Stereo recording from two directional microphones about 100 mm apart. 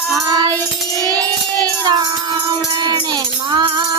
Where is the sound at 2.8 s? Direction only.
45° right (ahead or behind).